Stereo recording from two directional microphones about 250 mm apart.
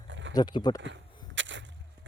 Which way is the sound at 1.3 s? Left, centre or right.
Right.